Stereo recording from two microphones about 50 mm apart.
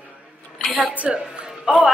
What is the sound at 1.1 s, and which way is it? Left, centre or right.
Speech, centre.